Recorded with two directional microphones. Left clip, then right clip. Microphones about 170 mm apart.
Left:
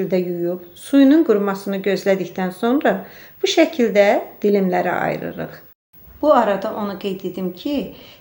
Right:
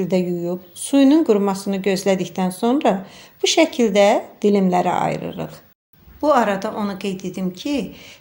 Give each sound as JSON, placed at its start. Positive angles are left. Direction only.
{"t": 0.1, "sound": "speech", "side_deg": -35}